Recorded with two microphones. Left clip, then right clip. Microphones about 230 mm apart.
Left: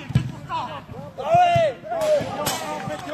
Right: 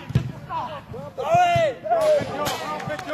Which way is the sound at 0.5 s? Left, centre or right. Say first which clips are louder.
Left 1 dB; left.